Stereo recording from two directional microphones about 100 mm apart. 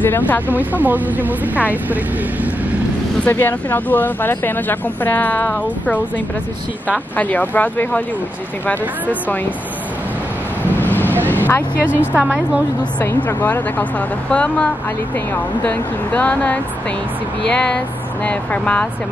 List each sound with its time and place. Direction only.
0.0 s speech: 20° left (ahead or behind)
0.5 s speech: 15° right (ahead or behind)
3.3 s speech: 20° left (ahead or behind)
10.8 s vehicle: 20° left (ahead or behind)
11.8 s speech: 15° right (ahead or behind)
13.0 s speech: 25° left (ahead or behind)